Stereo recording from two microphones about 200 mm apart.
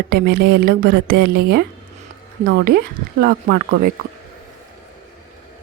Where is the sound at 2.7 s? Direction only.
55° right (ahead or behind).